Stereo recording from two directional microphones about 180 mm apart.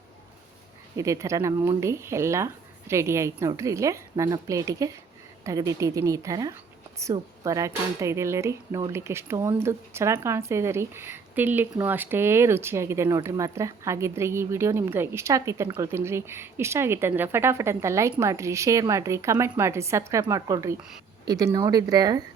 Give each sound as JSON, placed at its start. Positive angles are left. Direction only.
{"t": 0.9, "sound": "a woman's voice", "side_deg": -15}